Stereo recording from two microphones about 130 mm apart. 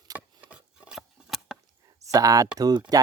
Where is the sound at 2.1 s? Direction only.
25° right (ahead or behind).